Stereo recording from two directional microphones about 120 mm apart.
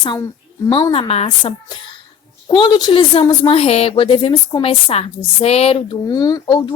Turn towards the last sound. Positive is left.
turn(degrees=35)  # may be behind; listen again after turning